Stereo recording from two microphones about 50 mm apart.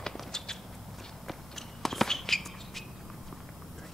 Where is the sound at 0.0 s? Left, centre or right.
Centre.